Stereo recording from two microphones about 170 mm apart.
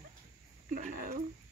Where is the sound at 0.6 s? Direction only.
50° right (ahead or behind).